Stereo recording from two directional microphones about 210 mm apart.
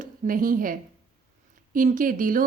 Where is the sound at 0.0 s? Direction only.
40° right (ahead or behind).